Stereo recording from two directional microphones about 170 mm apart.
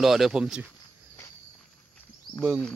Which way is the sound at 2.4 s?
5° left (ahead or behind).